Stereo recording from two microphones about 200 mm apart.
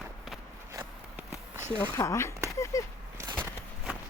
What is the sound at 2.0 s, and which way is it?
Speech, 15° left (ahead or behind).